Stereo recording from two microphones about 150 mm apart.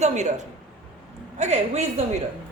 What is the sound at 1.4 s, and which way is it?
Speech, 45° right (ahead or behind).